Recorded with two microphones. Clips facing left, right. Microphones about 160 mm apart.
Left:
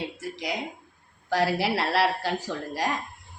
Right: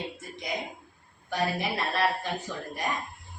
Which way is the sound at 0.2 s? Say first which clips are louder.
Left 6 dB; 90° left.